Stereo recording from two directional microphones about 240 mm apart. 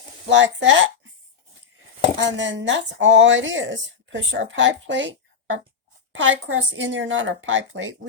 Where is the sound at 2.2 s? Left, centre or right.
Right.